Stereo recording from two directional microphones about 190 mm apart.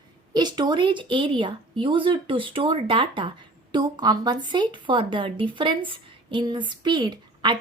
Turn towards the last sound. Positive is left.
turn(degrees=-25)  # may be behind; listen again after turning